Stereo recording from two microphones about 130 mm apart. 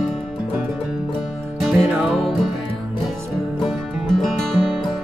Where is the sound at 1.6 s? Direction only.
5° right (ahead or behind).